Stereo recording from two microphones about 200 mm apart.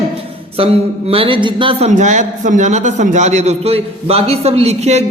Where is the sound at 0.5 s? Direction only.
30° right (ahead or behind).